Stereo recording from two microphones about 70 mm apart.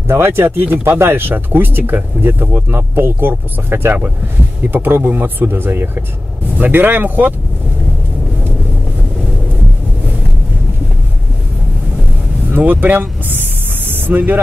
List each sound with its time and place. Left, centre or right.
0.1 s speech: right
12.4 s speech: right